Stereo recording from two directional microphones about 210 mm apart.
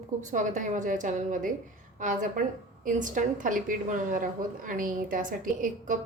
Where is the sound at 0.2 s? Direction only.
35° right (ahead or behind).